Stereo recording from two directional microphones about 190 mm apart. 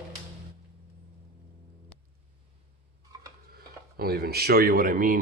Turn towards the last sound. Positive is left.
turn(degrees=-45)  # may be behind; listen again after turning